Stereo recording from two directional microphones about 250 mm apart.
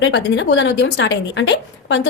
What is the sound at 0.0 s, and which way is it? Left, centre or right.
Speech, left.